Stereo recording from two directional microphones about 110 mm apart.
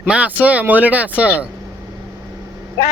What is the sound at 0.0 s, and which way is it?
Speech, 15° right (ahead or behind).